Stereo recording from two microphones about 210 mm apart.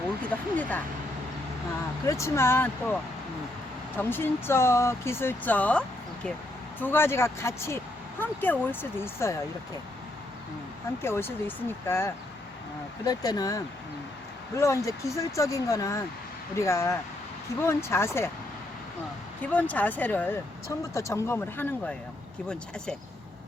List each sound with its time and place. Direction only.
0.3 s speech: 5° left (ahead or behind)
2.0 s speech: 15° left (ahead or behind)
11.0 s speech: 10° left (ahead or behind)
19.4 s speech: 5° left (ahead or behind)